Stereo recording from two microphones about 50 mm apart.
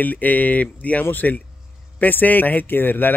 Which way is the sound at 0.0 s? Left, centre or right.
Left.